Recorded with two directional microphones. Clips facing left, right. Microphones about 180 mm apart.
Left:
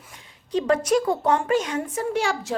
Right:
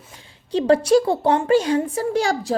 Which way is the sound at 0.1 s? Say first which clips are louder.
Right 2 dB; 30° right (ahead or behind).